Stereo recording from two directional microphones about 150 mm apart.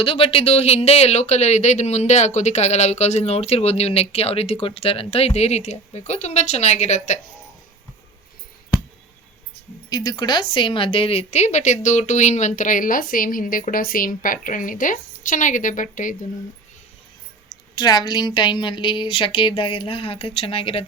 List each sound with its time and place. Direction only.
0.0 s speech: 35° left (ahead or behind)
9.9 s speech: 25° left (ahead or behind); by 16.1 s 60° left (ahead or behind)
17.5 s a woman's voice: 25° left (ahead or behind)